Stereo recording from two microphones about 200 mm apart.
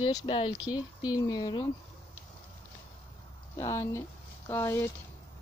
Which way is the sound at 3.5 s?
15° left (ahead or behind).